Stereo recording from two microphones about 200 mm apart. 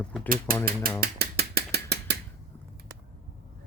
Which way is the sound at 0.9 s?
50° right (ahead or behind).